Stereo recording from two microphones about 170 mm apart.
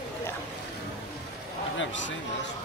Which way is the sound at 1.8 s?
90° left.